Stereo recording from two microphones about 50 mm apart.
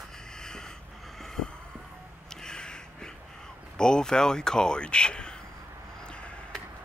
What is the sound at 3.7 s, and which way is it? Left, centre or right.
Speech, centre.